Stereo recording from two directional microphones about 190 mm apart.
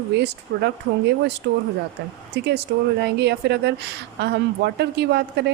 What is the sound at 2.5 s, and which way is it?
Speech, 60° right (ahead or behind).